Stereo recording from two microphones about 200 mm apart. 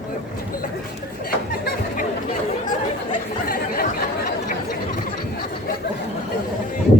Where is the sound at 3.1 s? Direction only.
45° left (ahead or behind).